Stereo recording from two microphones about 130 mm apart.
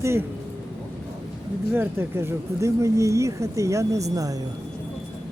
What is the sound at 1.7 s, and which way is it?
Speech, 15° right (ahead or behind).